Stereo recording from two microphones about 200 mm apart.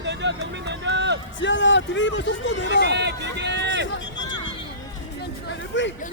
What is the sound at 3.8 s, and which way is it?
Vehicle, 65° left (ahead or behind).